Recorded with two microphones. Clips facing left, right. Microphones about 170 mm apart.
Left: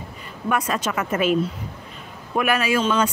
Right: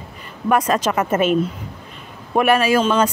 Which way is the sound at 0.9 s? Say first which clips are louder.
Right 5 dB; 45° right (ahead or behind).